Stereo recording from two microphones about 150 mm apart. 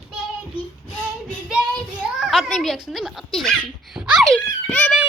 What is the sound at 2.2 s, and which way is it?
A child's voice, centre (ahead or behind).